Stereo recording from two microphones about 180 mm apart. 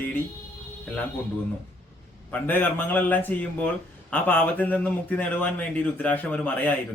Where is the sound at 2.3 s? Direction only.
10° left (ahead or behind).